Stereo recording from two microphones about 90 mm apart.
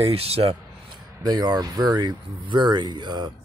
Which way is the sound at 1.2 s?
50° right (ahead or behind).